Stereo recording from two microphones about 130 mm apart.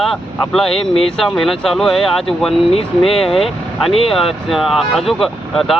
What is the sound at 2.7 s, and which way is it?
Speech, 45° left (ahead or behind).